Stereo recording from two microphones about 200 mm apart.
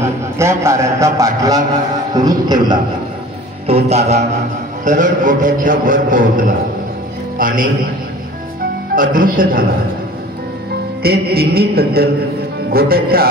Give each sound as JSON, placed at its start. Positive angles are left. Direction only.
{"t": 0.0, "sound": "a man's voice", "side_deg": -15}
{"t": 3.6, "sound": "a man's voice", "side_deg": -30}
{"t": 8.9, "sound": "music", "side_deg": -45}
{"t": 11.0, "sound": "music", "side_deg": -50}